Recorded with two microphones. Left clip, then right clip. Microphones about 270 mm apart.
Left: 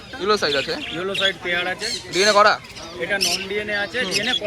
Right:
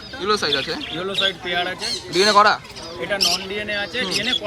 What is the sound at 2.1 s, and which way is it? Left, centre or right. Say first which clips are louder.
Speech: right 1 dB; centre.